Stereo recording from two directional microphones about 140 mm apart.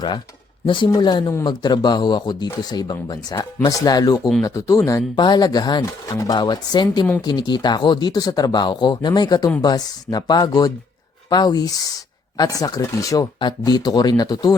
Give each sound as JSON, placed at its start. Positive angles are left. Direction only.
{"t": 0.9, "sound": "speech", "side_deg": 30}